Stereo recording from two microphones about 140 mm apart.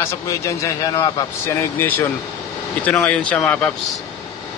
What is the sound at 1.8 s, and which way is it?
Speech, 15° left (ahead or behind).